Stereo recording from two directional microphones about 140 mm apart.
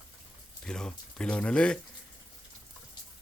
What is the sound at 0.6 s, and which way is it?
Speech, 5° left (ahead or behind).